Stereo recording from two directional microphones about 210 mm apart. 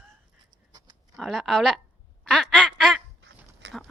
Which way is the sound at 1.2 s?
Centre (ahead or behind).